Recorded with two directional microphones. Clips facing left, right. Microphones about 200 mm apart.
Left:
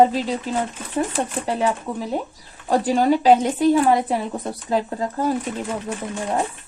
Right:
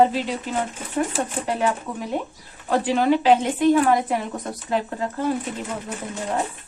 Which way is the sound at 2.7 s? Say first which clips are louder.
Left 2 dB; 40° left (ahead or behind).